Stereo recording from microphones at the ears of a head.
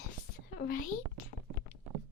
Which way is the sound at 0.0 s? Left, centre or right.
Left.